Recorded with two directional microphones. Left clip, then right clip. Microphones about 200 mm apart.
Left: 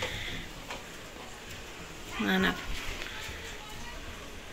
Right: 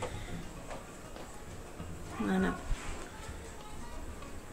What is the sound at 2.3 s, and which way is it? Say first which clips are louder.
Speech: left 6 dB; centre (ahead or behind).